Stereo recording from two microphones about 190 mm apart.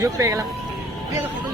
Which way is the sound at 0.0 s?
20° right (ahead or behind).